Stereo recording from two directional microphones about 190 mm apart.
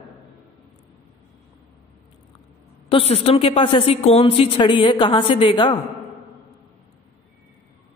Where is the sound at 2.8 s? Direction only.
30° left (ahead or behind).